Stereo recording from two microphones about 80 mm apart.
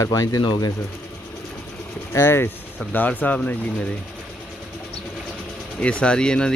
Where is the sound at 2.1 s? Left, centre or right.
Left.